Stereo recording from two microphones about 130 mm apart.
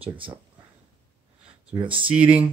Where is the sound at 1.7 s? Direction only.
40° right (ahead or behind).